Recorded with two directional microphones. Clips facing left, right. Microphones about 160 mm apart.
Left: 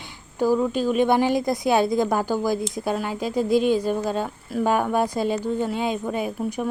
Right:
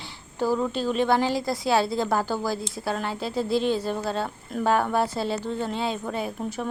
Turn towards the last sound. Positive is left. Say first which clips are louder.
# left 4 dB
turn(degrees=10)  # may be behind; listen again after turning